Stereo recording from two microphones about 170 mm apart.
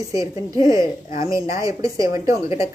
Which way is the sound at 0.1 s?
20° right (ahead or behind).